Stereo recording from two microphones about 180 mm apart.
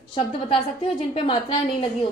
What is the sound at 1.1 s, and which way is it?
Speech, 30° left (ahead or behind).